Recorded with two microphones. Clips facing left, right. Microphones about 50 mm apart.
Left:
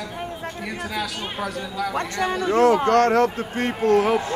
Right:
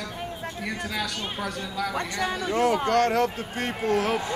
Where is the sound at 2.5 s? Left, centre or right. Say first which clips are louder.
Left 6 dB; left.